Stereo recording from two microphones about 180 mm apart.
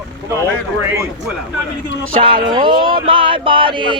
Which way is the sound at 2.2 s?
25° right (ahead or behind).